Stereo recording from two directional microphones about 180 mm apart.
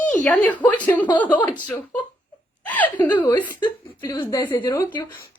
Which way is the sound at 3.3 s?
10° left (ahead or behind).